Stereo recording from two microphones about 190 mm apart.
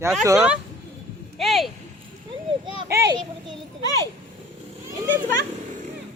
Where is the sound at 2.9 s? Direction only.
20° right (ahead or behind).